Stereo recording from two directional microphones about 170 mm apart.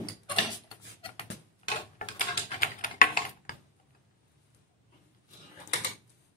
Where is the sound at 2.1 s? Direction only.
50° left (ahead or behind).